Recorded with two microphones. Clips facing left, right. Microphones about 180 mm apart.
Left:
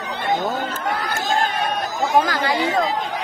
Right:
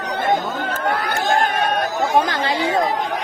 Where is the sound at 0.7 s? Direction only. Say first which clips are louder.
Right 3 dB; 60° right (ahead or behind).